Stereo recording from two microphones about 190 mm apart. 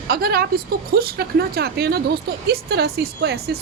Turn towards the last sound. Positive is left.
turn(degrees=-55)  # may be behind; listen again after turning